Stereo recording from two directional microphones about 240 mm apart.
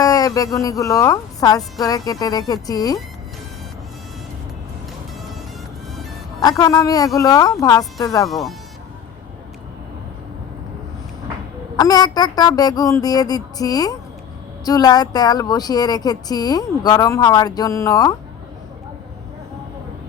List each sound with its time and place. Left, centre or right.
0.0 s speech: centre
6.4 s speech: centre
8.3 s speech: centre
11.8 s speech: centre